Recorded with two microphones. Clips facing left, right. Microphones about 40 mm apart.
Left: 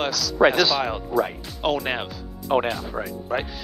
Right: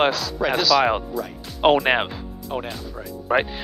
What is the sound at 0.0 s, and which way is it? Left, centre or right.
Speech, right.